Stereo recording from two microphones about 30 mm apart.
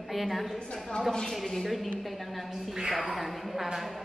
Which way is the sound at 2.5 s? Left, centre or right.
Centre.